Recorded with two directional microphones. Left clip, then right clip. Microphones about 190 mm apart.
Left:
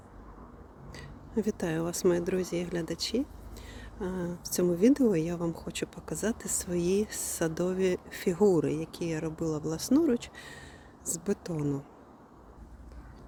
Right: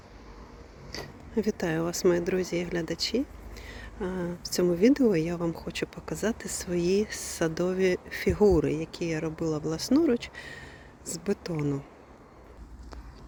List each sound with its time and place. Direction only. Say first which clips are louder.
1.0 s speech: right 2 dB; centre (ahead or behind)